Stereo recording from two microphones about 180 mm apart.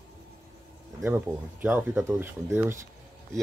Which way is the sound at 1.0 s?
10° right (ahead or behind).